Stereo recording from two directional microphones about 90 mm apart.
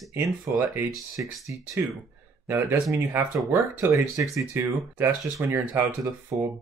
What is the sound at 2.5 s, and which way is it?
Speech, 25° right (ahead or behind).